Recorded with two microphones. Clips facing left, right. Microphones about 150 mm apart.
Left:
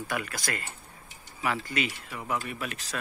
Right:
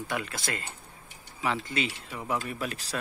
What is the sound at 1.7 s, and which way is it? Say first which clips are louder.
Speech: even; 25° right (ahead or behind).